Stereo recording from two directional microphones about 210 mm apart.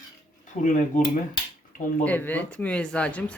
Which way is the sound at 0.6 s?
35° left (ahead or behind).